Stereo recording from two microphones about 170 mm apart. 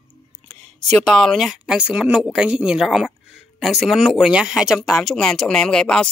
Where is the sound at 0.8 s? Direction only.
5° left (ahead or behind).